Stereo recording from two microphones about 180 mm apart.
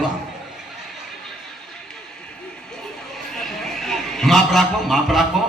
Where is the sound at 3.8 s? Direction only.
Centre (ahead or behind).